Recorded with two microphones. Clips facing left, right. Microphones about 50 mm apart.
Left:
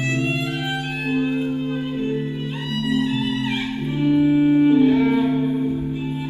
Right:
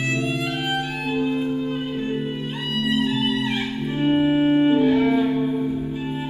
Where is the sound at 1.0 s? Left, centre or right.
Left.